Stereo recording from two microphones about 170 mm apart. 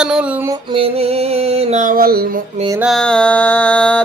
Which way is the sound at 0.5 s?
30° right (ahead or behind).